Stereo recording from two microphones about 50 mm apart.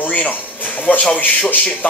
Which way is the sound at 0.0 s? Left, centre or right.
Left.